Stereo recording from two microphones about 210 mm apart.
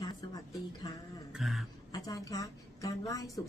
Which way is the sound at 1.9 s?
15° left (ahead or behind).